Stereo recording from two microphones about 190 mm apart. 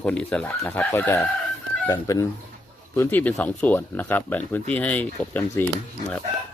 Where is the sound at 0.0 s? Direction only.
5° left (ahead or behind).